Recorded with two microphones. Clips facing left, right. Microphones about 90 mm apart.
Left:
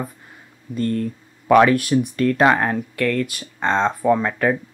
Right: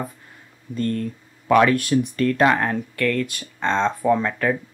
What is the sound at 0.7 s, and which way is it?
Speech, 5° left (ahead or behind).